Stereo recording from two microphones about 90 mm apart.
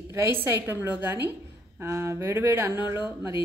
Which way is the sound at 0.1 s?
30° right (ahead or behind).